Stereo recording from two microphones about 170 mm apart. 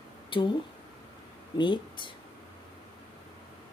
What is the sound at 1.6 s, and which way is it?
Speech, 25° left (ahead or behind).